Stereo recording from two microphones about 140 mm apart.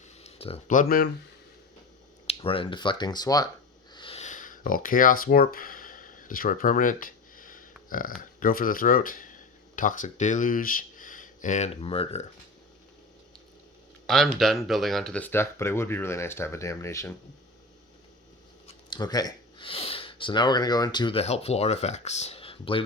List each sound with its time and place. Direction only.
0.2 s a sound: 45° left (ahead or behind)
0.7 s speech: 80° left
2.2 s speech: 40° left (ahead or behind)
3.9 s a sound: 35° left (ahead or behind)
4.2 s a sound: 65° left (ahead or behind)
8.4 s speech: 85° left; by 12.2 s 45° left (ahead or behind)
14.1 s speech: centre (ahead or behind); by 17.2 s 20° left (ahead or behind)
18.9 s speech: 30° left (ahead or behind)
21.2 s speech: 50° left (ahead or behind)